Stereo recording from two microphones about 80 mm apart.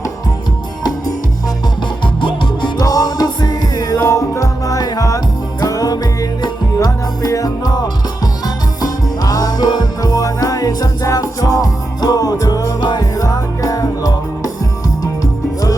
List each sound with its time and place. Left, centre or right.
2.2 s music: left
2.8 s music: left
4.0 s music: left